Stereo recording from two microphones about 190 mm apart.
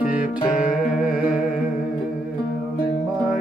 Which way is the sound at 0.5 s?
45° left (ahead or behind).